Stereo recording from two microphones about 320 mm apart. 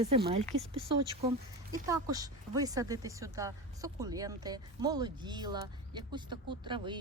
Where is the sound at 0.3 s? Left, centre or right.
Centre.